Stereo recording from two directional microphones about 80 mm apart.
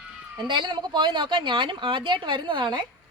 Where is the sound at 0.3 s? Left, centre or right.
Right.